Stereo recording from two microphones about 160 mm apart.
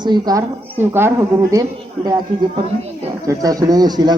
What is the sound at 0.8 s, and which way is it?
Speech, 15° right (ahead or behind).